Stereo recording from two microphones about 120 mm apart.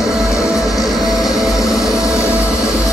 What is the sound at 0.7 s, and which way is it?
Music, centre (ahead or behind).